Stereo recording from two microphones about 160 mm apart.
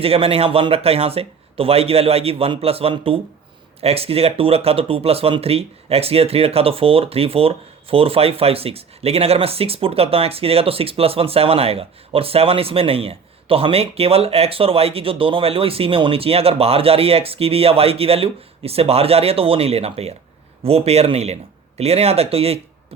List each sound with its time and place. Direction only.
0.0 s speech: 35° right (ahead or behind)